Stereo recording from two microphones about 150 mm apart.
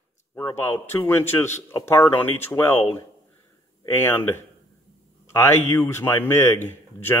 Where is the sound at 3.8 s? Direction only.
15° left (ahead or behind).